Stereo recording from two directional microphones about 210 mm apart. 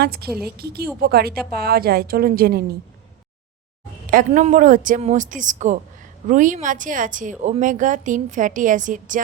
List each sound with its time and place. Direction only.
0.0 s a woman's voice: 50° right (ahead or behind)
4.1 s speech: 35° right (ahead or behind)